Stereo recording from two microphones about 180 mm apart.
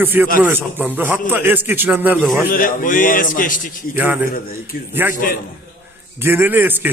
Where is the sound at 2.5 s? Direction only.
50° left (ahead or behind).